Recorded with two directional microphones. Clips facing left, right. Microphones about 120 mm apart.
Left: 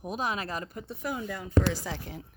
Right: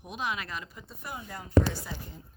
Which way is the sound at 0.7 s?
70° left (ahead or behind).